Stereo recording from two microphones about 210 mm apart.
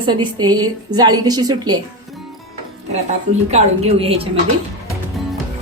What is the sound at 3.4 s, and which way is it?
Speech, 30° right (ahead or behind).